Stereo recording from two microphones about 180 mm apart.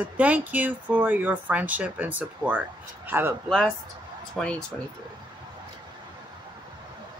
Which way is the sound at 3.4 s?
Centre (ahead or behind).